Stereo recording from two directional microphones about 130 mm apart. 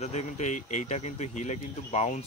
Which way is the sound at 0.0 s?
60° left (ahead or behind).